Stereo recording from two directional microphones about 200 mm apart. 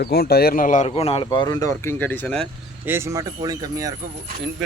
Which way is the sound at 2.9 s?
15° right (ahead or behind).